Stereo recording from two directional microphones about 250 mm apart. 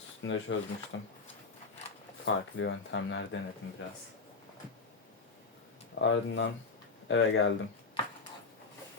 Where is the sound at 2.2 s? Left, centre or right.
Left.